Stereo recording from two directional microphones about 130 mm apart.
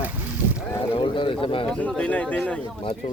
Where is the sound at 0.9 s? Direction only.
40° left (ahead or behind).